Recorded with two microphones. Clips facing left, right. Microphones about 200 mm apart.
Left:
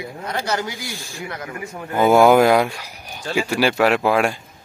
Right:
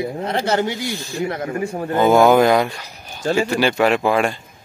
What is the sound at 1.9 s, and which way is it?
Speech, 10° left (ahead or behind).